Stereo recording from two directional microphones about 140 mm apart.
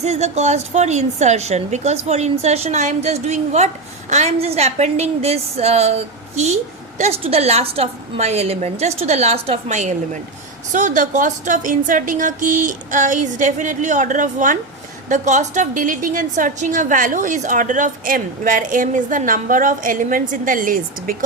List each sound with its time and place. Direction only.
0.0 s a woman's voice: 50° right (ahead or behind); by 21.2 s 85° right